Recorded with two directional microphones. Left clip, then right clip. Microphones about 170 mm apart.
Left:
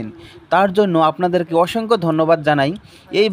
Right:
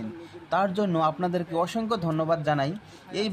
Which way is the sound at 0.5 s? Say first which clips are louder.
Left 11 dB; 40° left (ahead or behind).